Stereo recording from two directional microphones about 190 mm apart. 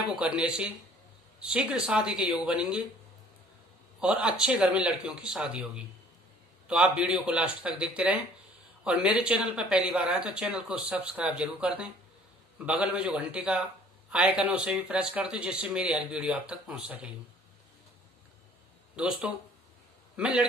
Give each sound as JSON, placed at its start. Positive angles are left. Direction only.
{"t": 0.0, "sound": "speech", "side_deg": -5}
{"t": 4.0, "sound": "speech", "side_deg": -5}
{"t": 18.9, "sound": "a man's voice", "side_deg": -5}